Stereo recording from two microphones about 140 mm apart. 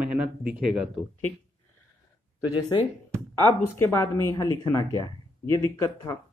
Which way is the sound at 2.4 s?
30° left (ahead or behind).